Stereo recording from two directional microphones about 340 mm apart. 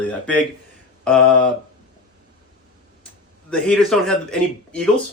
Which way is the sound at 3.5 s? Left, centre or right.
Centre.